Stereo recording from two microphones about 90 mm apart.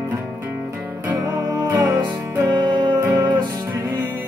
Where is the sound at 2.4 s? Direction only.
55° right (ahead or behind).